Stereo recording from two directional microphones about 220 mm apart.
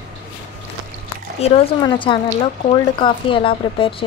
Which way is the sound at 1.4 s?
25° left (ahead or behind).